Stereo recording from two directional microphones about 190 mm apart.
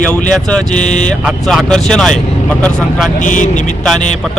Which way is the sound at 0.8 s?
40° left (ahead or behind).